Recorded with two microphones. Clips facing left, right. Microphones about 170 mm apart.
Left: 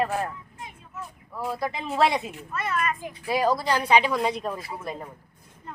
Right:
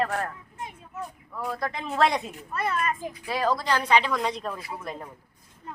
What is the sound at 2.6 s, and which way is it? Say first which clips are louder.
Speech: even; 30° right (ahead or behind).